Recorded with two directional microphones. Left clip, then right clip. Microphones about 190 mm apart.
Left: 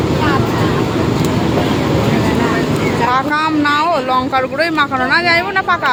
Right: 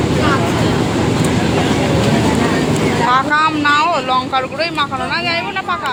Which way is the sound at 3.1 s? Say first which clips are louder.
Right 3 dB; 35° left (ahead or behind).